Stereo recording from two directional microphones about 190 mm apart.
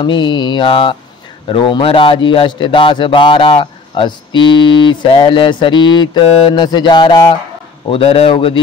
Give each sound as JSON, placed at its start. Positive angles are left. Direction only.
{"t": 0.0, "sound": "speech", "side_deg": 25}